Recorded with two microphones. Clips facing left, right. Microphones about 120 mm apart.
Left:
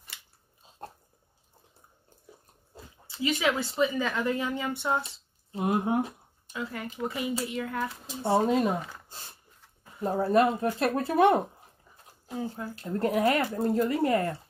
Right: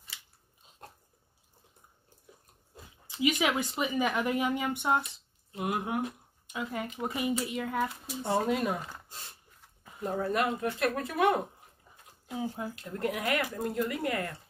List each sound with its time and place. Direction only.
0.7 s dog: 30° left (ahead or behind)
3.1 s speech: 15° right (ahead or behind)
5.0 s a sound: 30° left (ahead or behind)
6.5 s speech: 20° right (ahead or behind)
8.2 s speech: 25° left (ahead or behind)
12.4 s speech: 10° right (ahead or behind)
12.8 s speech: 35° left (ahead or behind)